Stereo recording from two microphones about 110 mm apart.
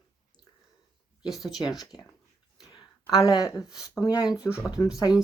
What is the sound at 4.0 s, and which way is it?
Speech, 35° left (ahead or behind).